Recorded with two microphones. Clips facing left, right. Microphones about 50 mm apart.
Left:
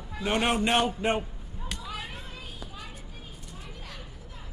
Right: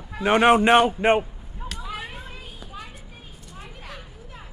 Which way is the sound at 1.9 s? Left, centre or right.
Right.